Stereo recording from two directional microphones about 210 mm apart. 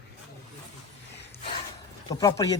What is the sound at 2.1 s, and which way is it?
Speech, 15° left (ahead or behind).